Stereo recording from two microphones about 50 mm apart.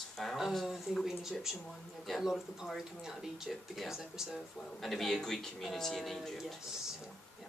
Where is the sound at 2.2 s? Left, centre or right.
Centre.